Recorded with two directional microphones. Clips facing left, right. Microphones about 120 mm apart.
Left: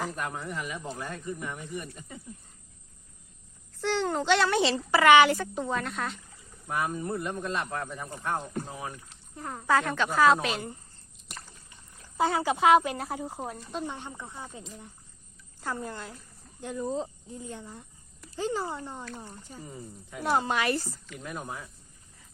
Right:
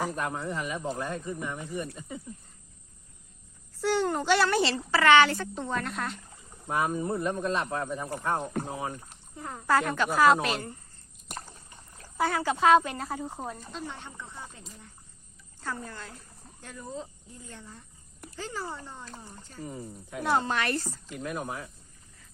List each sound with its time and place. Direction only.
0.4 s speech: 30° right (ahead or behind)
3.8 s a child's voice: 10° right (ahead or behind)
4.9 s speech: 15° left (ahead or behind)
6.7 s speech: 20° right (ahead or behind)
9.3 s speech: 5° left (ahead or behind)
11.3 s a sound: 45° right (ahead or behind)
12.1 s speech: 20° left (ahead or behind)
15.6 s speech: 15° left (ahead or behind)
21.2 s speech: 5° right (ahead or behind)